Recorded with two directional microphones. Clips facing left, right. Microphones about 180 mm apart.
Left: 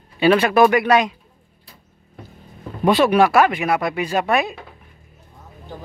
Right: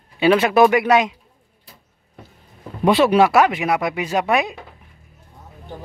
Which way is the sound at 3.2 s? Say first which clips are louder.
Even; 20° right (ahead or behind).